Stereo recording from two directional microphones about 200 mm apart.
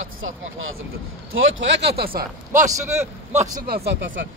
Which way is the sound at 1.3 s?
80° right.